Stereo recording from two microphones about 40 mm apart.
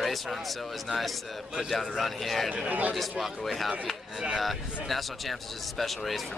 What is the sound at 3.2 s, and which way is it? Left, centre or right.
Speech, centre.